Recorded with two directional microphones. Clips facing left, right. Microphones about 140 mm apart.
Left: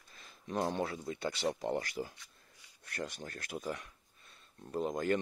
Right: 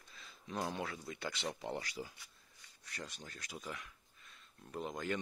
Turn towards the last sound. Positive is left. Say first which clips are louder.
# left 7 dB
turn(degrees=45)  # may be behind; listen again after turning